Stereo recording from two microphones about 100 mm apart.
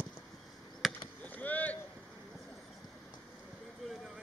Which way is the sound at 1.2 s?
15° left (ahead or behind).